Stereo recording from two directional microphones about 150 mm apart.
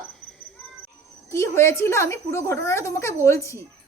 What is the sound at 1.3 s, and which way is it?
A woman's voice, 20° left (ahead or behind).